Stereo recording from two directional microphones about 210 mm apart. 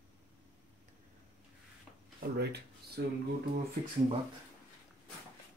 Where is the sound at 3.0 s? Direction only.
55° right (ahead or behind).